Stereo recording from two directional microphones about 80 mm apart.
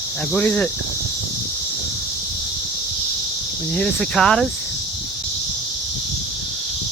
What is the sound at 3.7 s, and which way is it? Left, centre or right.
Cricket, centre.